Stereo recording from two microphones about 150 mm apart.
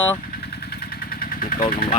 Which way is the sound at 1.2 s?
65° left (ahead or behind).